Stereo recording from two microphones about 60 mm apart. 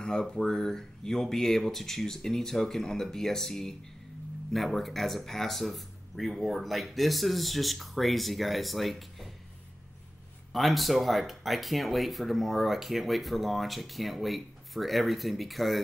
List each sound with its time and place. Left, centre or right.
0.0 s speech: centre
10.5 s speech: centre